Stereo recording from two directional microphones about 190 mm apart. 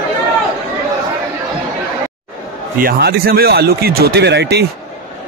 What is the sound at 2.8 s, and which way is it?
Speech, 55° right (ahead or behind).